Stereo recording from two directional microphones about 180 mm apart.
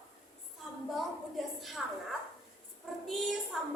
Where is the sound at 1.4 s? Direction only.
Centre (ahead or behind).